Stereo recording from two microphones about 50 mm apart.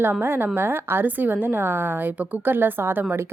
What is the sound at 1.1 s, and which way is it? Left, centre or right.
A woman's voice, right.